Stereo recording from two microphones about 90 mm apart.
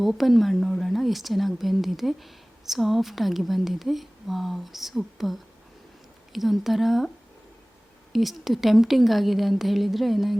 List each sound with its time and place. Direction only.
0.0 s speech: centre (ahead or behind)
8.1 s speech: centre (ahead or behind)